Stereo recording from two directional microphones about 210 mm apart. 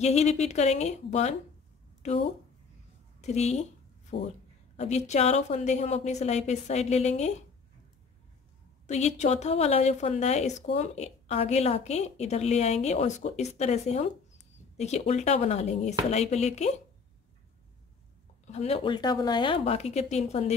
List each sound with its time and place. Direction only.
0.0 s a woman's voice: 30° left (ahead or behind)
3.2 s a woman's voice: 30° left (ahead or behind)
4.1 s speech: 50° left (ahead or behind)
4.7 s a woman's voice: 35° left (ahead or behind)
8.8 s a woman's voice: 35° left (ahead or behind)
18.5 s speech: 30° left (ahead or behind)